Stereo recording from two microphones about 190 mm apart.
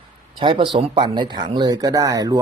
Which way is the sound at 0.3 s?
25° right (ahead or behind).